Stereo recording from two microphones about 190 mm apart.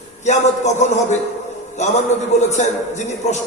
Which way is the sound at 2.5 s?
40° left (ahead or behind).